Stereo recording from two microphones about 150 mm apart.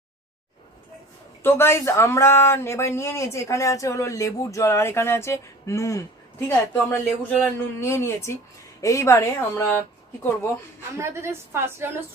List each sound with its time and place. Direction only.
1.4 s speech: 15° left (ahead or behind)
11.0 s a woman's voice: 15° right (ahead or behind)